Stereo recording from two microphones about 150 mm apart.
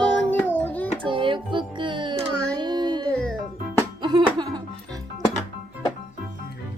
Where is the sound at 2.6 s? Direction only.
30° right (ahead or behind).